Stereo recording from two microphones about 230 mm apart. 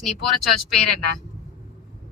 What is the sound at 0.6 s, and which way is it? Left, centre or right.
Speech, left.